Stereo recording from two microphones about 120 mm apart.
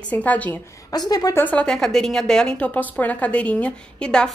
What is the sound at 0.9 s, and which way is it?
Speech, 35° left (ahead or behind).